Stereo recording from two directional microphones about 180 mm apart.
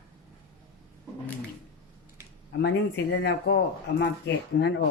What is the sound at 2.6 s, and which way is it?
Speech, 70° left (ahead or behind).